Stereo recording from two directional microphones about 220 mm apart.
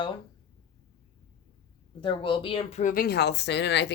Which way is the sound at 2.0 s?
20° left (ahead or behind).